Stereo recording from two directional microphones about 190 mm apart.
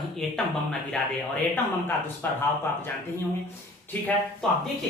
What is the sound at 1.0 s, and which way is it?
Speech, 5° left (ahead or behind).